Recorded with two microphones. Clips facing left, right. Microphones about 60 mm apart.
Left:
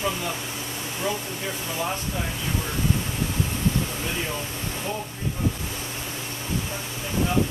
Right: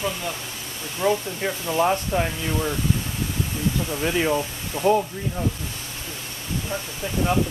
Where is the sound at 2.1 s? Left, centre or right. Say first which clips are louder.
Right 8 dB; right.